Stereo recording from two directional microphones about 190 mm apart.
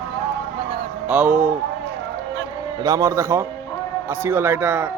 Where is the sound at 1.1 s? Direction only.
5° right (ahead or behind).